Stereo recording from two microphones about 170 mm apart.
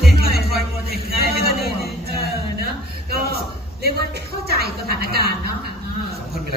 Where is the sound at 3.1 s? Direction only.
65° right (ahead or behind).